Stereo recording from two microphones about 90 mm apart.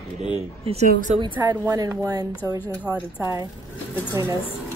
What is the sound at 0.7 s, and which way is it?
Speech, 90° right.